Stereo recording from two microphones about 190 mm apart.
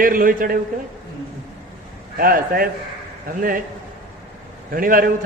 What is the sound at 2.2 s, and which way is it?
Speech, 50° right (ahead or behind).